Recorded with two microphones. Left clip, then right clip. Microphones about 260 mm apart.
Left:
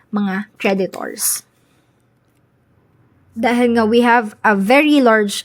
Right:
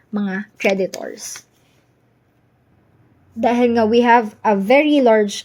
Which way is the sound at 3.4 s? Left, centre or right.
Centre.